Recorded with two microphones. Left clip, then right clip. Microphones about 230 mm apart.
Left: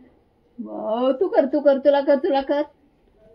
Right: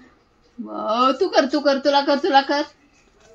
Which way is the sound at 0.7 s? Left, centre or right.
Right.